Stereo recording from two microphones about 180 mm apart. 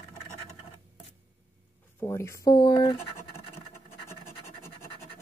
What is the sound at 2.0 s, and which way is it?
Speech, 15° left (ahead or behind).